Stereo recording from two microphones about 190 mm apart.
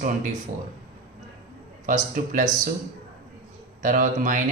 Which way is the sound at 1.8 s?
45° right (ahead or behind).